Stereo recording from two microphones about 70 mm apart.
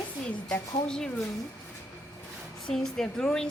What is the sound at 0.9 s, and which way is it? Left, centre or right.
Speech, centre.